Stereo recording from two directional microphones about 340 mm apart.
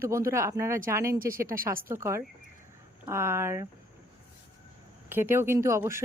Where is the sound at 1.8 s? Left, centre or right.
Centre.